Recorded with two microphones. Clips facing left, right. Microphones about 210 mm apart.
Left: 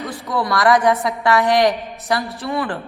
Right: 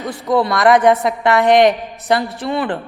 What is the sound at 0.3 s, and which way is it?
A woman's voice, 20° right (ahead or behind).